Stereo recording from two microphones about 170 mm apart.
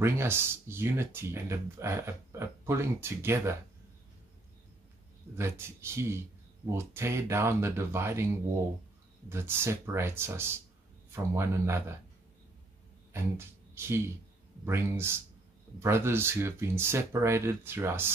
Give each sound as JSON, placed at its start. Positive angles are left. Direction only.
{"t": 0.0, "sound": "speech", "side_deg": -15}
{"t": 5.4, "sound": "speech", "side_deg": -15}
{"t": 9.3, "sound": "speech", "side_deg": -15}
{"t": 13.7, "sound": "speech", "side_deg": -15}